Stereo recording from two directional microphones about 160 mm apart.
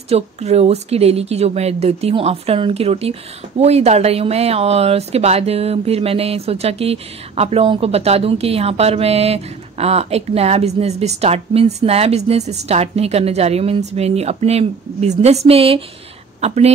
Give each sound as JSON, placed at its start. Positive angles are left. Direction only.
{"t": 0.1, "sound": "a woman's voice", "side_deg": -40}